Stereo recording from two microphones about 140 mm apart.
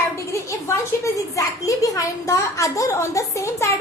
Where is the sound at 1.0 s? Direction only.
25° left (ahead or behind).